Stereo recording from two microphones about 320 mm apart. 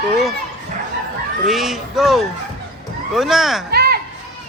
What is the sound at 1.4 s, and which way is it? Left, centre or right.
Speech, centre.